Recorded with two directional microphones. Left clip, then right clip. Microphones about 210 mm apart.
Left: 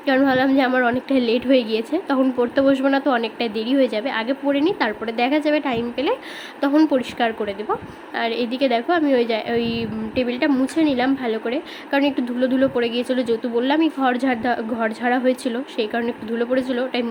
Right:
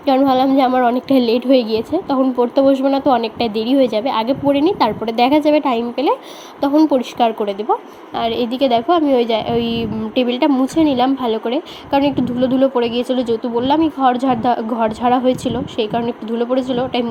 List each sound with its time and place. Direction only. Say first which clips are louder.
0.7 s speech: right 4 dB; 20° left (ahead or behind)
0.9 s a woman's voice: right 5 dB; 15° right (ahead or behind)